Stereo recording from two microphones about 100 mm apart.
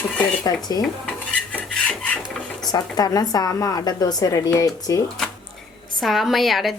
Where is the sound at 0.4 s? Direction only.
40° left (ahead or behind).